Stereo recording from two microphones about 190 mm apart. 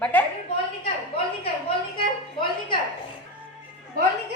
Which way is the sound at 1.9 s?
25° left (ahead or behind).